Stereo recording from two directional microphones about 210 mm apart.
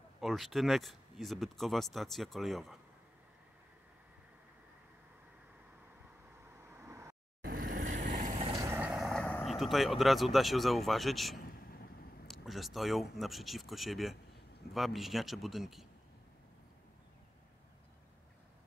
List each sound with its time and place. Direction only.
0.2 s speech: centre (ahead or behind)
6.7 s a sound: 10° right (ahead or behind)
7.7 s vehicle: 40° right (ahead or behind)
8.5 s speech: 10° right (ahead or behind)
11.3 s vehicle: 45° left (ahead or behind)
12.3 s speech: centre (ahead or behind)